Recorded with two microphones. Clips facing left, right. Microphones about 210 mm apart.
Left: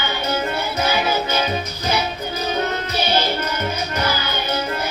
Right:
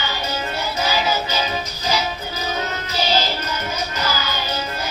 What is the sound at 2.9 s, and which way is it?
Music, 55° left (ahead or behind).